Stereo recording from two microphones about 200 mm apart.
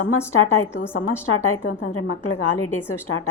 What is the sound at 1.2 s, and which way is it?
A woman's voice, 90° left.